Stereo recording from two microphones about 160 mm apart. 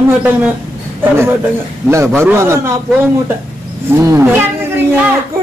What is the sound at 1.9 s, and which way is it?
A man's voice, 15° right (ahead or behind).